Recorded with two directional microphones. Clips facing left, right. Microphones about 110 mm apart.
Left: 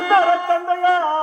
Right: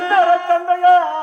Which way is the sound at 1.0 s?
40° left (ahead or behind).